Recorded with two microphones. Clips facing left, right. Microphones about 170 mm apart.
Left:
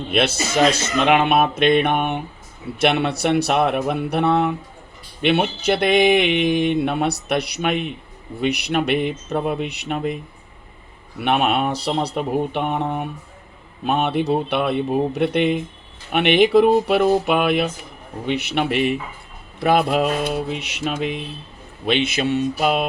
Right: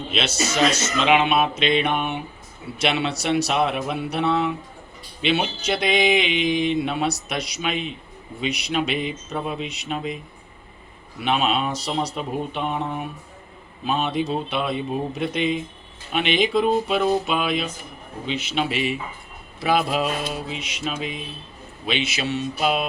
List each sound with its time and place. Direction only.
0.1 s speech: 55° left (ahead or behind)
11.2 s speech: 60° left (ahead or behind)